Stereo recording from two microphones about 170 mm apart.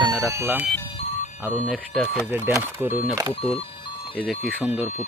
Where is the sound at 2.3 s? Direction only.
15° right (ahead or behind).